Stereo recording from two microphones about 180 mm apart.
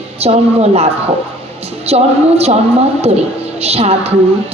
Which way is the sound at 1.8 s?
35° right (ahead or behind).